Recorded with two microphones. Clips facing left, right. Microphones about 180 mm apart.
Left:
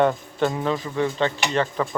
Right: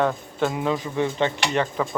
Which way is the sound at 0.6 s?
15° right (ahead or behind).